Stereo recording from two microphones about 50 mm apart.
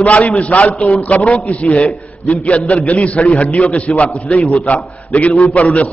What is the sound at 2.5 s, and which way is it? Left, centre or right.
A man's voice, left.